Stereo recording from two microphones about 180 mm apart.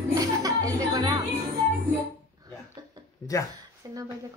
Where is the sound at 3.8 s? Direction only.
20° right (ahead or behind).